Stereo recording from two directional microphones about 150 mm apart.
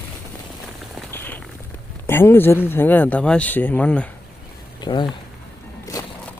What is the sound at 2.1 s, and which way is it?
Speech, 15° left (ahead or behind).